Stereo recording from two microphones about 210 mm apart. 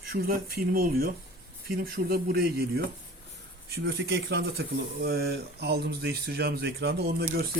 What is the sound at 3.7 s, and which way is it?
A man's voice, 50° right (ahead or behind).